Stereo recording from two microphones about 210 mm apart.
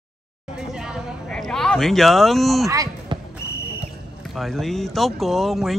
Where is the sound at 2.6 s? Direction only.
15° right (ahead or behind).